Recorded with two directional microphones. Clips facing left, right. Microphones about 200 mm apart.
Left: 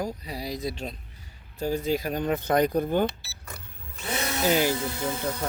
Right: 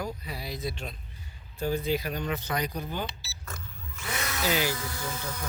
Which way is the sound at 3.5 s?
30° left (ahead or behind).